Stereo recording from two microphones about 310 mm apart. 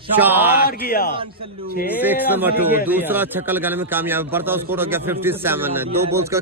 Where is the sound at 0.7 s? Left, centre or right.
Left.